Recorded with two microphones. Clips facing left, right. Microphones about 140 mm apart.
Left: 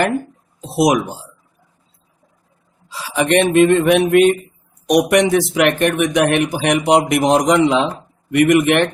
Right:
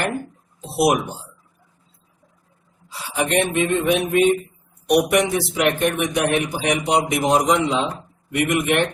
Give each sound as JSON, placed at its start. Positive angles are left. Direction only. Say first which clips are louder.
{"t": 0.8, "sound": "a man's voice", "louder": "left 3 dB", "side_deg": 90}
{"t": 2.9, "sound": "speech", "louder": "left 5 dB", "side_deg": 90}
{"t": 4.9, "sound": "a man's voice", "louder": "left 4 dB", "side_deg": 90}